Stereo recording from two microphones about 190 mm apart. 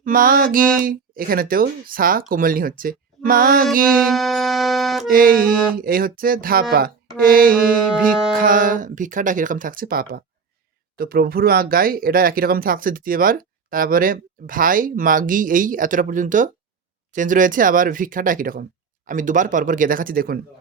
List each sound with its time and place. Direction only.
0.0 s speech: 50° right (ahead or behind)
3.8 s music: centre (ahead or behind)
5.0 s speech: 50° right (ahead or behind)